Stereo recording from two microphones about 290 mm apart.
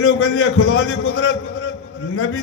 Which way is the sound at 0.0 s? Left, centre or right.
Left.